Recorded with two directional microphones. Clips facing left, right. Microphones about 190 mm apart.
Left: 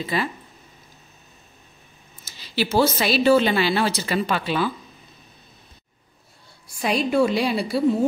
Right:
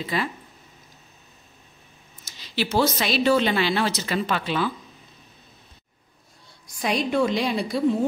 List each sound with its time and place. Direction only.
0.0 s a woman's voice: centre (ahead or behind)
2.3 s a sound: 5° left (ahead or behind)
3.0 s a woman's voice: 5° left (ahead or behind)
6.8 s a woman's voice: 5° left (ahead or behind)